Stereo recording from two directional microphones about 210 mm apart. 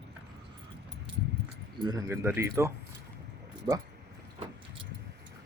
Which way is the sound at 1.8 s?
20° right (ahead or behind).